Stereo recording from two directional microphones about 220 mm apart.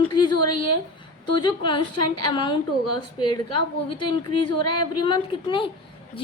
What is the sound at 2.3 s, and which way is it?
Speech, 20° left (ahead or behind).